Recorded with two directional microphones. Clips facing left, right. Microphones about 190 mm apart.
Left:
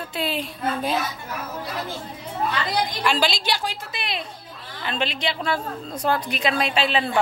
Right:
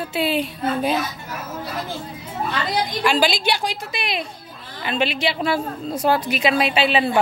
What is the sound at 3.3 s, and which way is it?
Speech, 60° right (ahead or behind).